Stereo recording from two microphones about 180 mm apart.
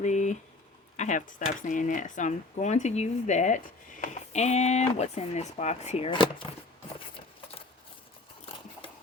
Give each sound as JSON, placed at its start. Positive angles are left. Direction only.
{"t": 0.0, "sound": "a sound", "side_deg": 40}
{"t": 0.9, "sound": "speech", "side_deg": 45}
{"t": 6.1, "sound": "speech", "side_deg": 25}